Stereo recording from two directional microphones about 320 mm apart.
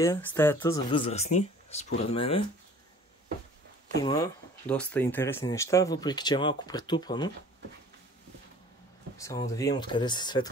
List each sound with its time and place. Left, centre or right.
0.0 s speech: centre
4.0 s speech: centre
9.2 s speech: centre